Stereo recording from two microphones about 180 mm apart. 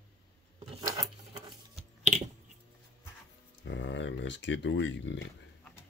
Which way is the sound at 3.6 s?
90° left.